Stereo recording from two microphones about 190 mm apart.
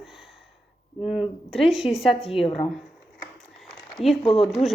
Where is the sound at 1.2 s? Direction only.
30° left (ahead or behind).